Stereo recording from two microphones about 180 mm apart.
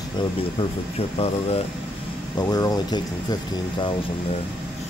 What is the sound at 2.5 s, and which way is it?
Speech, 20° left (ahead or behind).